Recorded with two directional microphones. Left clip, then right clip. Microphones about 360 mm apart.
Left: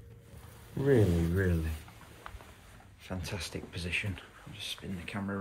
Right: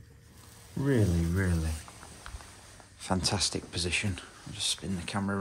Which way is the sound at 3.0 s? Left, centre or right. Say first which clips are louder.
Right 10 dB; centre.